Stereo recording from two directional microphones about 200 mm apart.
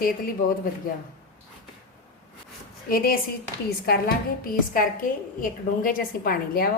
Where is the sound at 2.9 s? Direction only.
45° left (ahead or behind).